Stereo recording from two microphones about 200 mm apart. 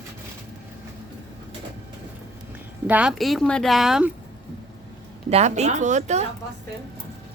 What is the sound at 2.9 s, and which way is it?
Speech, 5° right (ahead or behind).